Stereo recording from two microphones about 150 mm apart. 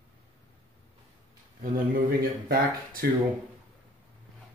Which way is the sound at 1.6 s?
70° right (ahead or behind).